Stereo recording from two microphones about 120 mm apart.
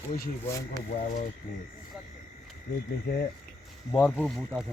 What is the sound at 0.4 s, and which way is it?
Speech, 25° left (ahead or behind).